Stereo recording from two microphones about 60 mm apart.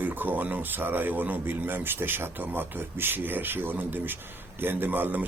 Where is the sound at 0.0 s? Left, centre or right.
Right.